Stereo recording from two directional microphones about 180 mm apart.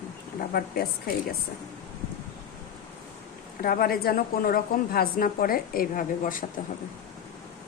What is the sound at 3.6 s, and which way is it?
Speech, 55° left (ahead or behind).